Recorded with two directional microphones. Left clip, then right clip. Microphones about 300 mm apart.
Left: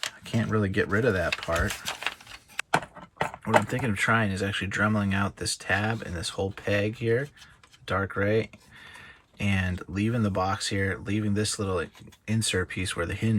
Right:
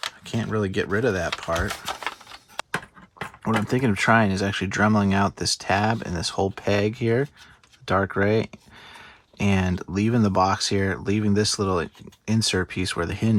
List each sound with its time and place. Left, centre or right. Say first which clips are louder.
0.3 s speech: right 2 dB; centre
3.4 s speech: right 1 dB; centre